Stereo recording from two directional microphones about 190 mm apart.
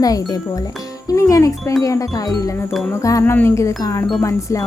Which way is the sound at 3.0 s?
15° left (ahead or behind).